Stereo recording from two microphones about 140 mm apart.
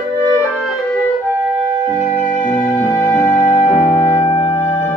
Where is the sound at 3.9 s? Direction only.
35° left (ahead or behind).